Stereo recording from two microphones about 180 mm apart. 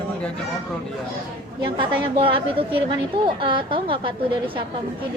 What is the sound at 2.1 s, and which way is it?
Speech, 30° right (ahead or behind).